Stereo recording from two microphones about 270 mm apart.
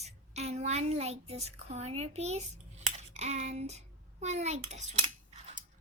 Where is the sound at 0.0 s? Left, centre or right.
Right.